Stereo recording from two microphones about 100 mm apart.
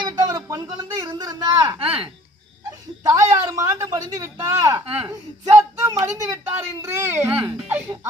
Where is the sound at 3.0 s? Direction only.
35° right (ahead or behind).